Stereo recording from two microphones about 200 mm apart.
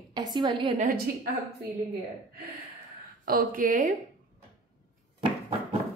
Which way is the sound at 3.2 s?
45° right (ahead or behind).